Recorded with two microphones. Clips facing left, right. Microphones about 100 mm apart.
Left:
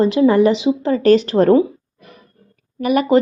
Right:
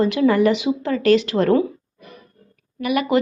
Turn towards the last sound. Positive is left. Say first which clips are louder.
# left 5 dB
turn(degrees=40)  # may be behind; listen again after turning